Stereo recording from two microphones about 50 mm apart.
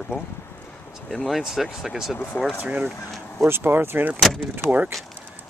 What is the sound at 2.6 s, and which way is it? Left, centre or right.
Speech, right.